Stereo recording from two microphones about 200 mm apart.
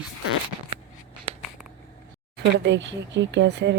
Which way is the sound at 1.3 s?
30° right (ahead or behind).